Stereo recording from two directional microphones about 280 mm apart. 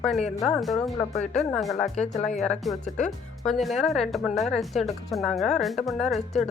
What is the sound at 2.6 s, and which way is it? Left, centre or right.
Speech, centre.